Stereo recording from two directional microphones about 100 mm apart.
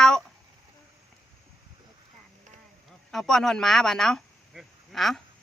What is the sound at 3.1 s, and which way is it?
Speech, 5° left (ahead or behind).